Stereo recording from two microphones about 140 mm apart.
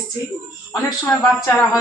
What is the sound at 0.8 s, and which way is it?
Speech, 25° left (ahead or behind).